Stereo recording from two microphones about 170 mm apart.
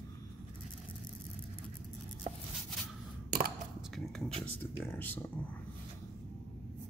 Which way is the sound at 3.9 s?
Centre (ahead or behind).